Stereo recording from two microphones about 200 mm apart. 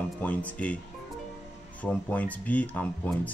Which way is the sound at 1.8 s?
5° left (ahead or behind).